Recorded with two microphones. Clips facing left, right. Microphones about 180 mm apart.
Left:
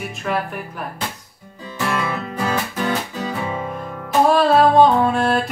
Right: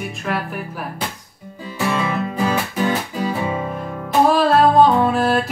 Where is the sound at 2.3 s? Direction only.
10° right (ahead or behind).